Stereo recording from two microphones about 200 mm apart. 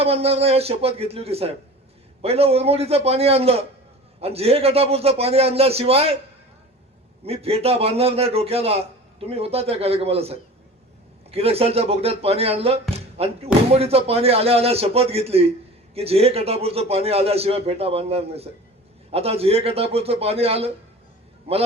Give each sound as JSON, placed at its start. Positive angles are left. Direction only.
{"t": 0.0, "sound": "a man's voice", "side_deg": -30}
{"t": 7.3, "sound": "a man's voice", "side_deg": -30}